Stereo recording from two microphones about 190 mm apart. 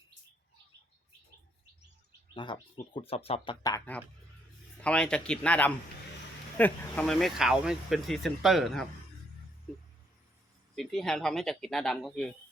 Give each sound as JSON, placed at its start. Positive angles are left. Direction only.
{"t": 2.3, "sound": "speech", "side_deg": 25}
{"t": 4.8, "sound": "speech", "side_deg": 5}
{"t": 10.8, "sound": "speech", "side_deg": 0}